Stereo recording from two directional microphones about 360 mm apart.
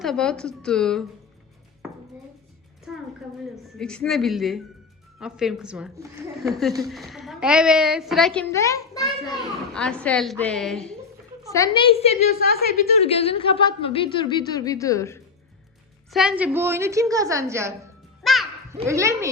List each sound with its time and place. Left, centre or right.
0.0 s a woman's voice: centre
2.9 s a woman's voice: centre
12.3 s speech: right
13.0 s speech: centre
16.1 s a woman's voice: centre
18.2 s music: centre
18.8 s a woman's voice: centre